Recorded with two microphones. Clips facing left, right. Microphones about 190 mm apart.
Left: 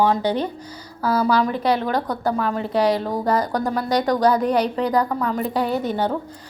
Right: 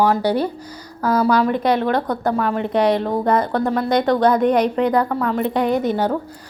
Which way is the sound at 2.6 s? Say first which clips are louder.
Right 2 dB; 35° left (ahead or behind).